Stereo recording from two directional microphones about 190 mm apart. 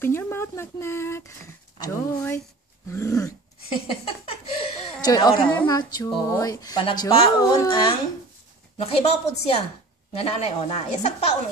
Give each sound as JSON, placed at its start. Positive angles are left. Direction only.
{"t": 0.0, "sound": "speech", "side_deg": 10}
{"t": 3.6, "sound": "a sound", "side_deg": 30}
{"t": 5.0, "sound": "a woman's voice", "side_deg": 20}